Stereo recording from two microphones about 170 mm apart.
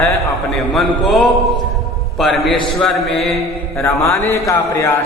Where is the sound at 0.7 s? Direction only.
Centre (ahead or behind).